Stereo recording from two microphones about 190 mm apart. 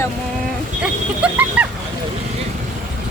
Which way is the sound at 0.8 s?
5° right (ahead or behind).